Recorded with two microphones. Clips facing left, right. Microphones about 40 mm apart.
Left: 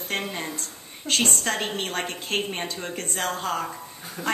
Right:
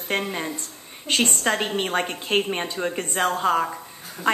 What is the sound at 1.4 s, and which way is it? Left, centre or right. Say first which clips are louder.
A woman's voice: right 4 dB; right.